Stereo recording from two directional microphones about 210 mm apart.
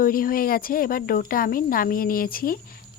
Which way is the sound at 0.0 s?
40° left (ahead or behind).